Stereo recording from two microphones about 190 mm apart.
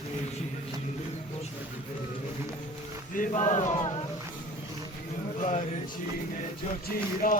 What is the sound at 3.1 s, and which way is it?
Speech, 40° left (ahead or behind).